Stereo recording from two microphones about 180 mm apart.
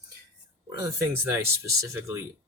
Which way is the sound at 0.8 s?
15° right (ahead or behind).